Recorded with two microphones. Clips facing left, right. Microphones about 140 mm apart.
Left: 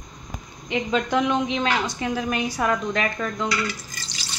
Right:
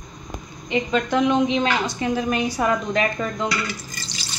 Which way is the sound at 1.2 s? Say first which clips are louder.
Right 4 dB; centre (ahead or behind).